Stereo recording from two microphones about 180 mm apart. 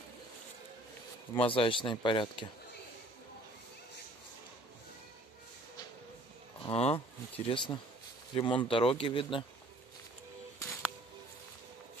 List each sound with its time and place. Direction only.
1.3 s speech: 30° left (ahead or behind)
6.6 s speech: 35° left (ahead or behind)
10.6 s music: 15° left (ahead or behind)